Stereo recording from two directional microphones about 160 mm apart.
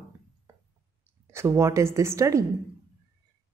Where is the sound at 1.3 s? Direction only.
15° right (ahead or behind).